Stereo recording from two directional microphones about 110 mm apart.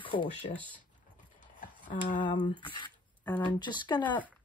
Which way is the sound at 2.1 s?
50° left (ahead or behind).